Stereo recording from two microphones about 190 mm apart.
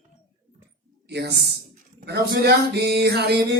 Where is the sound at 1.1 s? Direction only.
60° right (ahead or behind).